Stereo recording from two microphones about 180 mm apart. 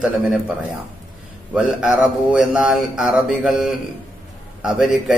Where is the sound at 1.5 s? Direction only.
5° right (ahead or behind).